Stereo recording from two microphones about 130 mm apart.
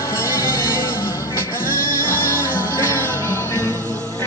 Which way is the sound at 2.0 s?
15° left (ahead or behind).